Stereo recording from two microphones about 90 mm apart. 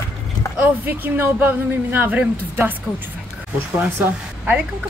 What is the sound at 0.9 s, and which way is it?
A woman's voice, 25° right (ahead or behind).